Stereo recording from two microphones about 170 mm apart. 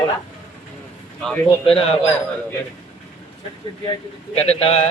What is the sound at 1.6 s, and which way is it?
Speech, 35° left (ahead or behind).